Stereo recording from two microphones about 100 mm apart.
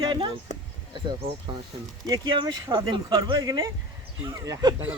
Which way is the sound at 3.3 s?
35° right (ahead or behind).